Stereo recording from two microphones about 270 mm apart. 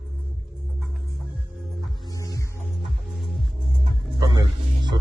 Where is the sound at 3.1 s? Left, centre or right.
Centre.